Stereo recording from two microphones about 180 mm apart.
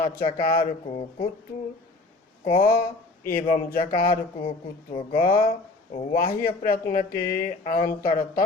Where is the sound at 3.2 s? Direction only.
55° left (ahead or behind).